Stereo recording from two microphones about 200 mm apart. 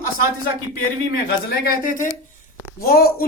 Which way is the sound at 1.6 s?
45° left (ahead or behind).